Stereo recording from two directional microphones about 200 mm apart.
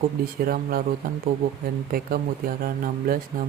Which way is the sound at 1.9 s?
45° right (ahead or behind).